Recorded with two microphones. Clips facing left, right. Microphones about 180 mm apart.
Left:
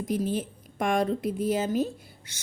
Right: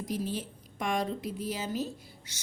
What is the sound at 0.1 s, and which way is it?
A woman's voice, 50° left (ahead or behind).